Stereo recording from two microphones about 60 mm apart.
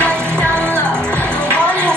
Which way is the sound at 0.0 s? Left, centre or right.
Left.